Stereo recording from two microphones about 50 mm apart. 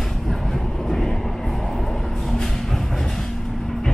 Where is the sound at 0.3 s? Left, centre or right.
Centre.